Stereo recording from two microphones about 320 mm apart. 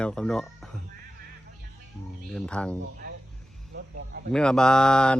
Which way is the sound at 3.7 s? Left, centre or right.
Right.